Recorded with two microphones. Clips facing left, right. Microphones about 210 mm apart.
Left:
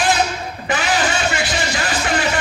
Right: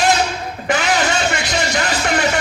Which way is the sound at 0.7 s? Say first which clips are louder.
Right 2 dB; 40° right (ahead or behind).